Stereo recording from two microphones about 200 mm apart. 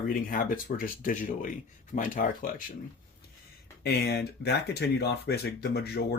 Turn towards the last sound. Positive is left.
turn(degrees=55)  # may be behind; listen again after turning